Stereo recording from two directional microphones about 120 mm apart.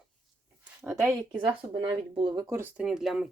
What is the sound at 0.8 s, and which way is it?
Speech, 25° right (ahead or behind).